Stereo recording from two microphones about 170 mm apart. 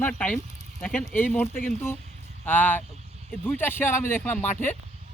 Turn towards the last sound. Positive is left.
turn(degrees=10)  # may be behind; listen again after turning